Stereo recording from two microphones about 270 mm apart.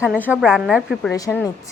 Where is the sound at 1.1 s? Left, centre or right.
Centre.